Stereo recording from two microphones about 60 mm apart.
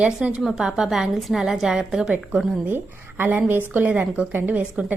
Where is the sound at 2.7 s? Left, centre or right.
Right.